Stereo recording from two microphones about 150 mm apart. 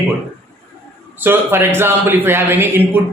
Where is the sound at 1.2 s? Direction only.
15° right (ahead or behind).